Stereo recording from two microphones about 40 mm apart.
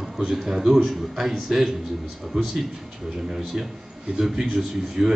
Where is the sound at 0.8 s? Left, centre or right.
Centre.